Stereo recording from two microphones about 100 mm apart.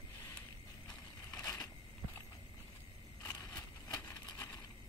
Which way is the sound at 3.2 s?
30° left (ahead or behind).